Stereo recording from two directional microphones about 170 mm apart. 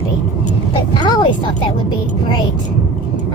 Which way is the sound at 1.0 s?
25° left (ahead or behind).